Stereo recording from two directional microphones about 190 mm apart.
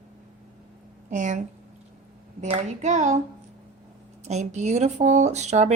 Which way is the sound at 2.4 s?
40° right (ahead or behind).